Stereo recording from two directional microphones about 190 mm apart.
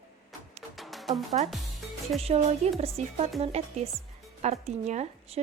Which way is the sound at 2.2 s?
35° right (ahead or behind).